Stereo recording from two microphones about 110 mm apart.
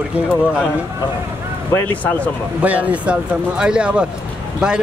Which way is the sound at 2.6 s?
15° right (ahead or behind).